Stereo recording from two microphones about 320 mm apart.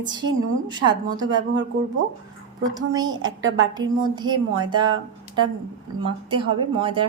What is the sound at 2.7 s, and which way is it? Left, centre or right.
A woman's voice, centre.